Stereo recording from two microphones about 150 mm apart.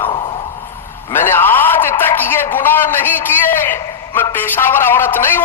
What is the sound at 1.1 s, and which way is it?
A man's voice, 15° left (ahead or behind).